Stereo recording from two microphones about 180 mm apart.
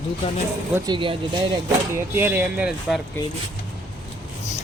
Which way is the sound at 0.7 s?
25° right (ahead or behind).